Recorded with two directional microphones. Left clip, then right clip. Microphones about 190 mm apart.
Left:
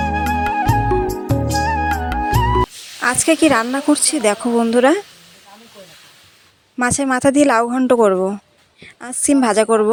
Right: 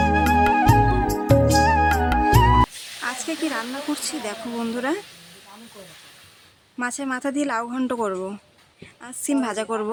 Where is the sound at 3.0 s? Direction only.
45° left (ahead or behind).